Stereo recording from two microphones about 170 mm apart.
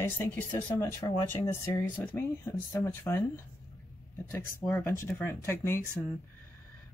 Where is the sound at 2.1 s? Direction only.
15° left (ahead or behind).